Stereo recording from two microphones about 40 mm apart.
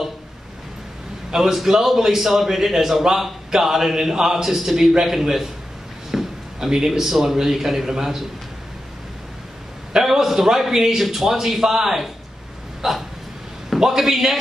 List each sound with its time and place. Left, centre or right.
1.3 s a man's voice: centre
9.9 s a man's voice: centre
12.8 s dog: centre
13.7 s a man's voice: centre